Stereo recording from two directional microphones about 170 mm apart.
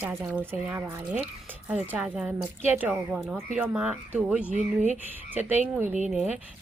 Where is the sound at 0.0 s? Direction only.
10° right (ahead or behind).